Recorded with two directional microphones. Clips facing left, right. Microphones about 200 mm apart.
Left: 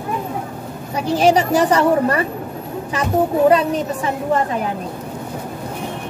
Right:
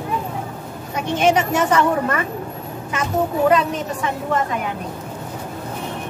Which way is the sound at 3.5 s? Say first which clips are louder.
Left 3 dB; 35° left (ahead or behind).